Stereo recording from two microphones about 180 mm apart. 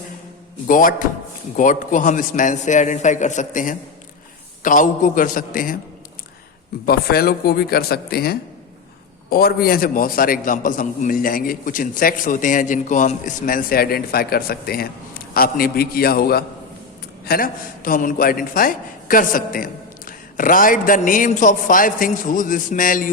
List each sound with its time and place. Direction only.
0.7 s a man's voice: 50° left (ahead or behind)
6.8 s a man's voice: 60° left (ahead or behind)